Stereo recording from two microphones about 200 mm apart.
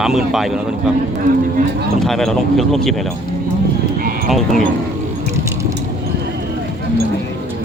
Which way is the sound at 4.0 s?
45° right (ahead or behind).